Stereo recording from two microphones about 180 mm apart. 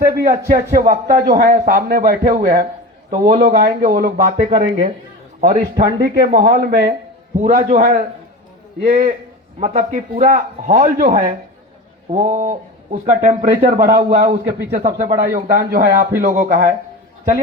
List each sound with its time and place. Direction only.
0.0 s a man's voice: 55° right (ahead or behind)
4.4 s a man's voice: 40° right (ahead or behind)
6.6 s a man's voice: 55° right (ahead or behind)
11.1 s speech: 30° right (ahead or behind)
12.1 s a man's voice: 45° right (ahead or behind)